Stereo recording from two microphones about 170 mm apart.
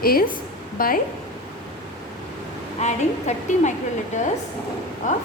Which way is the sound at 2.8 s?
45° left (ahead or behind).